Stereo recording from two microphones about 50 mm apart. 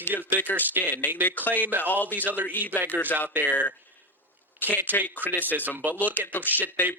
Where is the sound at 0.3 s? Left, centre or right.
Left.